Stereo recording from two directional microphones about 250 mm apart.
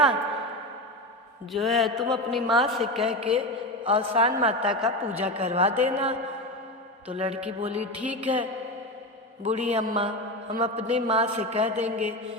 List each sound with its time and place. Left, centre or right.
1.5 s a woman's voice: centre
3.2 s a man's voice: right
4.8 s speech: centre
5.2 s a man's voice: right
7.9 s a woman's voice: centre
9.4 s a man's voice: right